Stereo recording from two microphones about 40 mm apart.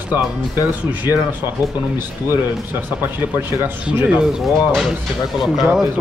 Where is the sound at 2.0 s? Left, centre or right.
Right.